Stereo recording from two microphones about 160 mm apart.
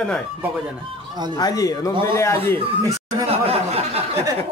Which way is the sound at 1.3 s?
20° left (ahead or behind).